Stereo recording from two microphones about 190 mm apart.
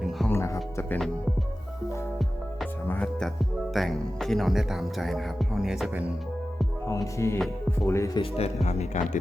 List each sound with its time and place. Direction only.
0.3 s music: 15° left (ahead or behind)
2.8 s music: 5° left (ahead or behind)
6.8 s music: 15° left (ahead or behind)
7.9 s speech: 15° left (ahead or behind)
8.2 s speech: 35° left (ahead or behind)